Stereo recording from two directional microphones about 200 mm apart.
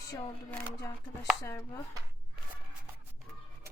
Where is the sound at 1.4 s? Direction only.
15° left (ahead or behind).